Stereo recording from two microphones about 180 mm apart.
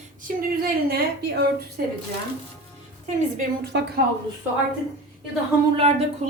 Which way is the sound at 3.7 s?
70° right (ahead or behind).